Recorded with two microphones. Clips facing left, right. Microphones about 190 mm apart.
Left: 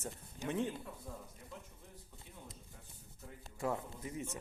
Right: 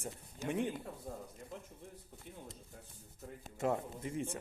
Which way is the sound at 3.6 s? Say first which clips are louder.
Right 3 dB; 30° right (ahead or behind).